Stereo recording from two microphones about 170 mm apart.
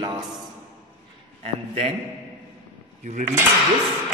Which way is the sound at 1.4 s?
40° right (ahead or behind).